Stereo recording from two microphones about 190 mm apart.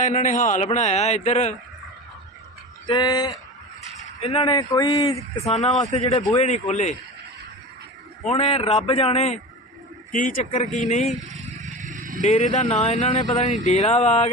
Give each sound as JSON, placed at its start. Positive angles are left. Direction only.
{"t": 0.0, "sound": "a man's voice", "side_deg": 40}
{"t": 2.8, "sound": "speech", "side_deg": 25}
{"t": 6.5, "sound": "a man's voice", "side_deg": 40}
{"t": 8.3, "sound": "a man's voice", "side_deg": 30}
{"t": 11.3, "sound": "vehicle", "side_deg": -40}
{"t": 12.2, "sound": "a man's voice", "side_deg": 40}